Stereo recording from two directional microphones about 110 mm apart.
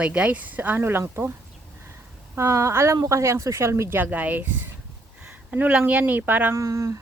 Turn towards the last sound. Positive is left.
turn(degrees=-30)  # may be behind; listen again after turning